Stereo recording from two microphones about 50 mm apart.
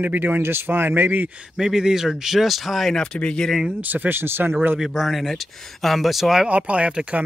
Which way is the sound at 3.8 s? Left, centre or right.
Right.